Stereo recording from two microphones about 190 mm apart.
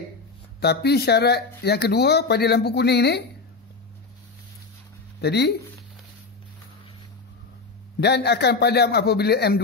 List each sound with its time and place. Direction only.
0.6 s speech: 60° left (ahead or behind)
5.2 s speech: 60° left (ahead or behind)
8.0 s speech: 60° left (ahead or behind)